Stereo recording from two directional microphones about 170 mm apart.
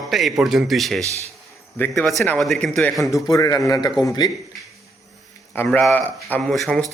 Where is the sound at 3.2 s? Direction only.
20° left (ahead or behind).